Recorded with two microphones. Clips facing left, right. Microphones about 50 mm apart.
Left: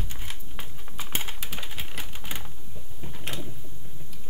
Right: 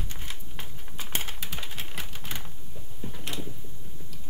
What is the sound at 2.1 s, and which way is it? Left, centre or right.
Typewriter, centre.